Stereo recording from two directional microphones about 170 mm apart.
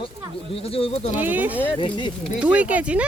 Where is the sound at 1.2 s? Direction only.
10° right (ahead or behind).